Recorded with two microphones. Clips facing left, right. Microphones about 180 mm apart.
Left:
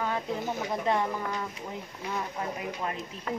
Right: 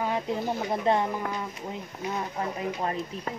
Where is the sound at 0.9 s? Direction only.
30° right (ahead or behind).